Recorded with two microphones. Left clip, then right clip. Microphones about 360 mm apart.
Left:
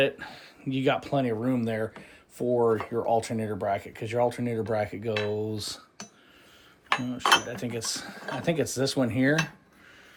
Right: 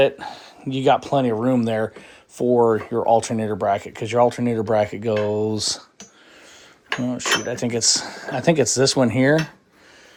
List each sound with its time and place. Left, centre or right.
0.0 s speech: centre
7.1 s speech: centre